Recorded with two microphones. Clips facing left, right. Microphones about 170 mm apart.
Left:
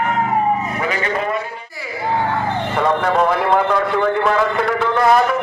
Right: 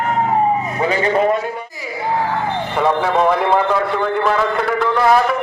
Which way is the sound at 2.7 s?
5° right (ahead or behind).